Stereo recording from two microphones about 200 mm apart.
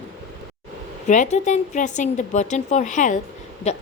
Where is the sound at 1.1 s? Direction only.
35° left (ahead or behind).